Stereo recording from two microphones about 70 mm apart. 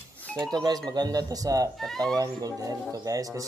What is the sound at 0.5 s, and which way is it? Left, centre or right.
Speech, right.